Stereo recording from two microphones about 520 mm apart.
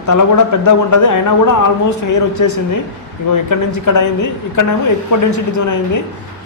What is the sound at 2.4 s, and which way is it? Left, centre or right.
A man's voice, left.